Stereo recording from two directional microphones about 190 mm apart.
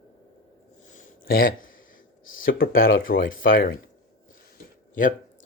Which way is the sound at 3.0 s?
50° left (ahead or behind).